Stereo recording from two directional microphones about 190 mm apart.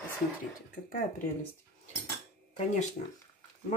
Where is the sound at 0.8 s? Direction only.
45° left (ahead or behind).